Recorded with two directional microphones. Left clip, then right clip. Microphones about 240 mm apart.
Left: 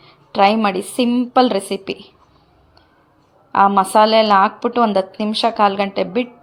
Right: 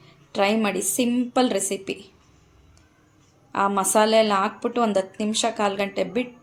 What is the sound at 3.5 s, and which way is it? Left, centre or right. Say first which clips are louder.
A woman's voice: left 9 dB; centre.